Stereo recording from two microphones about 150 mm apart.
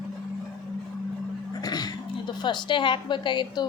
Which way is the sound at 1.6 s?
25° left (ahead or behind).